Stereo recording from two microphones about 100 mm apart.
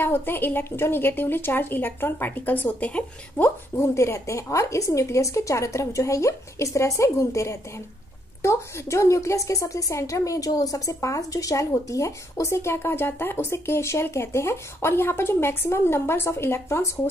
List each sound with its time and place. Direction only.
0.0 s a woman's voice: 20° left (ahead or behind)